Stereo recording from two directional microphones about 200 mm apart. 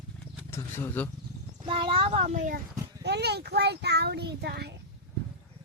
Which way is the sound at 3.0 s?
55° right (ahead or behind).